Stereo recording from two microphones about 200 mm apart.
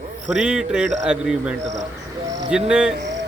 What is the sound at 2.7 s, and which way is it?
Speech, 5° right (ahead or behind).